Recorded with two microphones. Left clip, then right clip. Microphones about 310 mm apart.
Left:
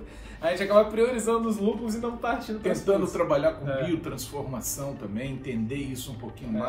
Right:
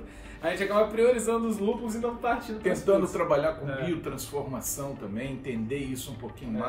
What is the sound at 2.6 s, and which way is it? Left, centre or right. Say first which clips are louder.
A man's voice: right 1 dB; centre.